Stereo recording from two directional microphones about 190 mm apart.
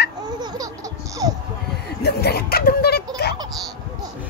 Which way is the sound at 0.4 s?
20° right (ahead or behind).